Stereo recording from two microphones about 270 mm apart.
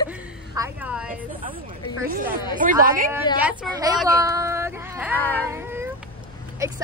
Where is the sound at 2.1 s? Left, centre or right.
Right.